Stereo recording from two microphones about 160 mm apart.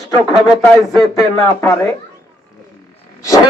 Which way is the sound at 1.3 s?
20° left (ahead or behind).